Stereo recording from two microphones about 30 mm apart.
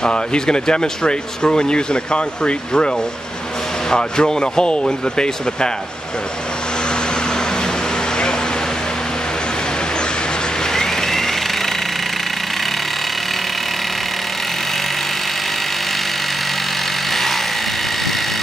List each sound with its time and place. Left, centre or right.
0.0 s speech: left
3.9 s speech: left
10.7 s vehicle: centre
17.1 s a sound: centre